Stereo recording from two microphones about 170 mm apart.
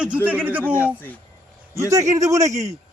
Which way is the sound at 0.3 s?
10° right (ahead or behind).